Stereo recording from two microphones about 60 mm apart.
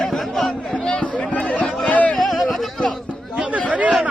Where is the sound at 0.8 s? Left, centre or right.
Centre.